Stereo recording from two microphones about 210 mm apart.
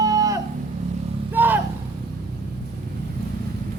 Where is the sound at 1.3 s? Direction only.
10° right (ahead or behind).